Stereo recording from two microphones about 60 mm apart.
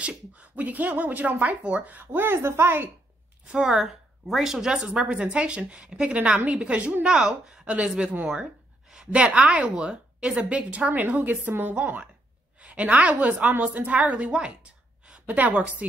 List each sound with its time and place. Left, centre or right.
0.4 s a woman's voice: right
3.4 s a woman's voice: centre